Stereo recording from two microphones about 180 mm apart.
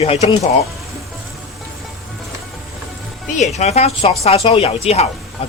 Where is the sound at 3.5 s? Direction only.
35° left (ahead or behind).